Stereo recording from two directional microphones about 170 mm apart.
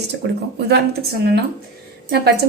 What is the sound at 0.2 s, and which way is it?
Speech, 90° right.